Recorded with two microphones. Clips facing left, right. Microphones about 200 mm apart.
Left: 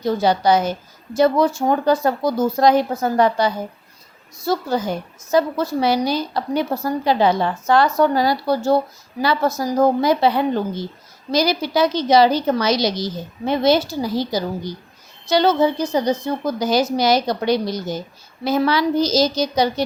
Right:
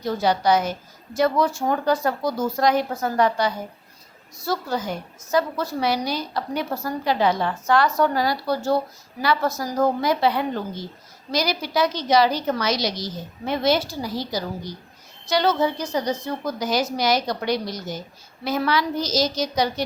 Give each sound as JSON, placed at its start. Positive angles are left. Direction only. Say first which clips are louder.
{"t": 0.0, "sound": "a woman's voice", "louder": "left 4 dB", "side_deg": 25}